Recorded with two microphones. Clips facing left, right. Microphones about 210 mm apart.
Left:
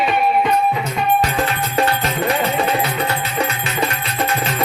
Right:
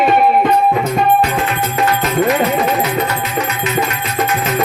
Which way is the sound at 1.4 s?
30° left (ahead or behind).